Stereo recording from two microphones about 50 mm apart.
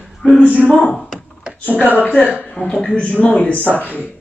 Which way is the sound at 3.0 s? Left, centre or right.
Left.